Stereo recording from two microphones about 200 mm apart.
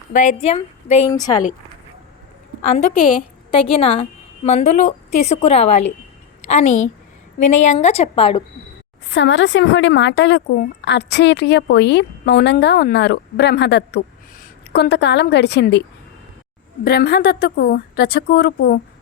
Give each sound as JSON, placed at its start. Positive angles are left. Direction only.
{"t": 0.1, "sound": "a woman's voice", "side_deg": 35}
{"t": 1.1, "sound": "a woman's voice", "side_deg": 20}
{"t": 2.6, "sound": "a woman's voice", "side_deg": 30}
{"t": 9.0, "sound": "a woman's voice", "side_deg": 65}
{"t": 16.8, "sound": "a woman's voice", "side_deg": 50}